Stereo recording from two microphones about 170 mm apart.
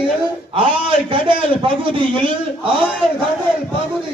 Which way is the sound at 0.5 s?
30° right (ahead or behind).